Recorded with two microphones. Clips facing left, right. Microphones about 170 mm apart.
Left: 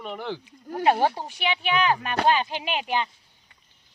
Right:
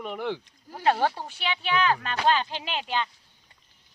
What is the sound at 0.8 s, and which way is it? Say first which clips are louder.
Speech: left 2 dB; 15° left (ahead or behind).